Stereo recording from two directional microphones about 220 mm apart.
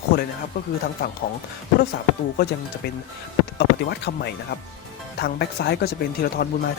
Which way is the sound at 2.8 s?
45° left (ahead or behind).